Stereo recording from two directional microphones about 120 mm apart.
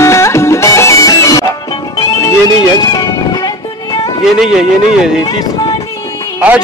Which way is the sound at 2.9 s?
35° left (ahead or behind).